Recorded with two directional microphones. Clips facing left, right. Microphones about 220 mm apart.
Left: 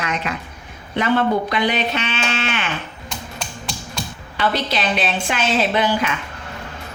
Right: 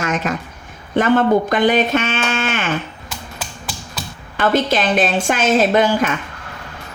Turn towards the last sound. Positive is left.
turn(degrees=-45)  # may be behind; listen again after turning